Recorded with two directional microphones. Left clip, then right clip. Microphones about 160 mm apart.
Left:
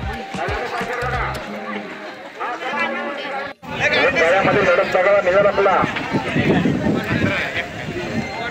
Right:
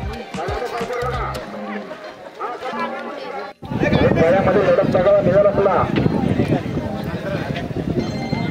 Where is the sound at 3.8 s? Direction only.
70° right (ahead or behind); by 5.8 s 85° right.